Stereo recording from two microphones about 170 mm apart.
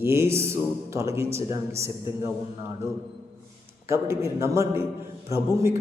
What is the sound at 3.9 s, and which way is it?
Speech, 15° right (ahead or behind).